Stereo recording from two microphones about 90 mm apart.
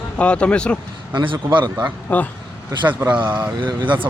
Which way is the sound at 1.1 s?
65° right (ahead or behind).